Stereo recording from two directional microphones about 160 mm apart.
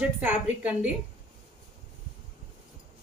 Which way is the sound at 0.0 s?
10° right (ahead or behind).